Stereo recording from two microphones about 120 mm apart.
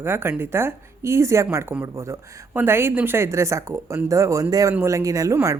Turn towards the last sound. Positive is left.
turn(degrees=-30)  # may be behind; listen again after turning